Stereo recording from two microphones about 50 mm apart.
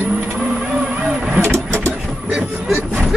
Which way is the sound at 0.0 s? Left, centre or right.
Right.